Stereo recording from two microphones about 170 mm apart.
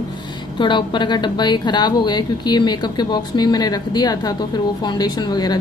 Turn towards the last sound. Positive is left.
turn(degrees=25)  # may be behind; listen again after turning